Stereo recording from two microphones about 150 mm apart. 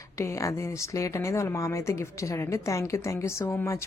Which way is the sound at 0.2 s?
20° left (ahead or behind).